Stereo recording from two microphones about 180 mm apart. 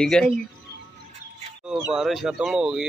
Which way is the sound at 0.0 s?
Centre (ahead or behind).